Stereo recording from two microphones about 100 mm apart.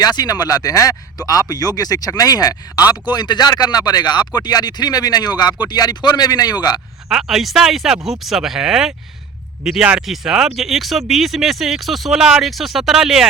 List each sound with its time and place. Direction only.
0.0 s speech: 40° left (ahead or behind)
7.1 s speech: 5° right (ahead or behind)